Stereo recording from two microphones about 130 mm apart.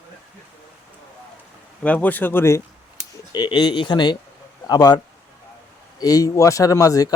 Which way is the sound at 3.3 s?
35° left (ahead or behind).